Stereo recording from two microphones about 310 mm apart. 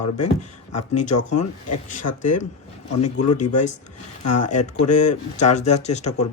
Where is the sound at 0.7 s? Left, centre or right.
Left.